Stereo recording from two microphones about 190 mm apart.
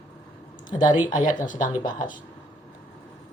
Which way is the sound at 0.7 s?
40° left (ahead or behind).